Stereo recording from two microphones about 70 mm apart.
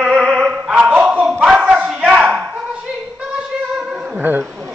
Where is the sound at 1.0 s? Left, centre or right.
Centre.